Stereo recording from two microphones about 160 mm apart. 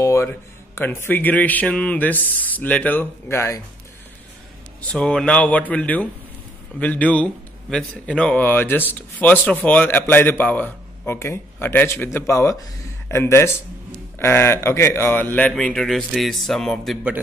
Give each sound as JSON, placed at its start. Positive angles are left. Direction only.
{"t": 0.0, "sound": "speech", "side_deg": 15}
{"t": 4.9, "sound": "a man's voice", "side_deg": 5}